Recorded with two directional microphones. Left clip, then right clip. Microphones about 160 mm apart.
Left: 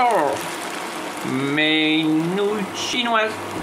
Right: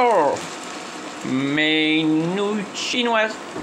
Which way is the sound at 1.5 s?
20° right (ahead or behind).